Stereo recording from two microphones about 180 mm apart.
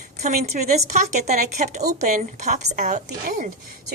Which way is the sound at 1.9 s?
45° right (ahead or behind).